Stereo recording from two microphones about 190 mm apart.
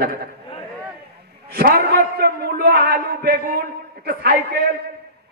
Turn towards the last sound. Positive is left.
turn(degrees=-55)  # may be behind; listen again after turning